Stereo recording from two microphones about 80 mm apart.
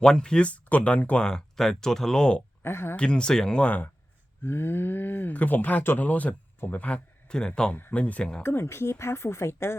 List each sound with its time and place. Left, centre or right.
0.0 s speech: centre
2.6 s speech: left
2.9 s speech: centre
4.4 s speech: left; by 7.8 s centre
7.8 s speech: left
8.4 s speech: left